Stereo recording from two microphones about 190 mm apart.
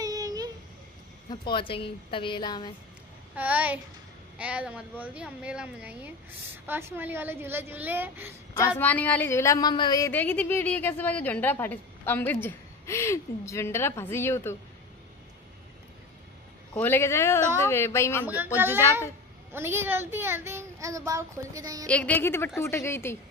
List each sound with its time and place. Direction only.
0.0 s a sound: 20° right (ahead or behind)
1.3 s a woman's voice: 25° left (ahead or behind)
3.3 s speech: 10° right (ahead or behind)
8.5 s speech: 10° left (ahead or behind)
16.7 s speech: 10° left (ahead or behind)
18.2 s speech: 10° right (ahead or behind)
21.8 s speech: 5° left (ahead or behind)